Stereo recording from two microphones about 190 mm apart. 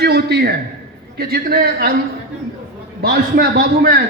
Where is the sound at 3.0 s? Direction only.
55° right (ahead or behind).